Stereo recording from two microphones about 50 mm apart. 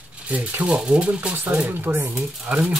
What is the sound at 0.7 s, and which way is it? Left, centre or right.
Speech, centre.